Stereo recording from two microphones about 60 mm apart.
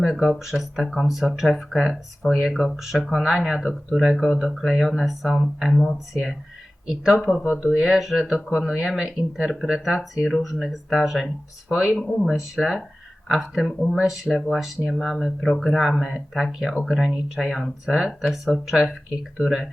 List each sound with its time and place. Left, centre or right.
0.0 s speech: centre
3.6 s speech: centre
6.8 s speech: centre
7.2 s speech: centre
7.4 s speech: centre
7.7 s speech: centre
12.2 s speech: centre